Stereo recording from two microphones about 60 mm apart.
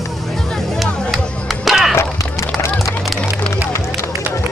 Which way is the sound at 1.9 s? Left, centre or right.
Left.